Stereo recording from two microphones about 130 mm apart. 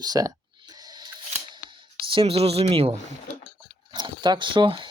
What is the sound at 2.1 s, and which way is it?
Speech, 45° right (ahead or behind).